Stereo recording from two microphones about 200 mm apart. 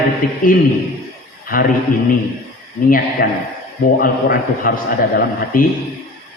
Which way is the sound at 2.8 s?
45° left (ahead or behind).